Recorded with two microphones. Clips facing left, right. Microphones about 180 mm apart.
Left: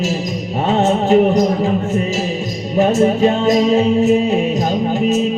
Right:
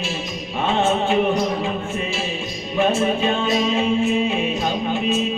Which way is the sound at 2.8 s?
40° left (ahead or behind).